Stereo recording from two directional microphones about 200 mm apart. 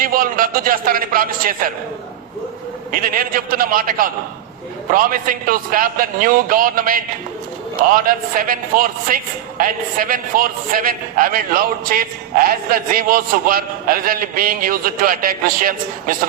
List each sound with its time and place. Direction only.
0.0 s a man's voice: 45° right (ahead or behind)
2.9 s a woman's voice: 45° right (ahead or behind)
8.0 s a woman's voice: 45° right (ahead or behind)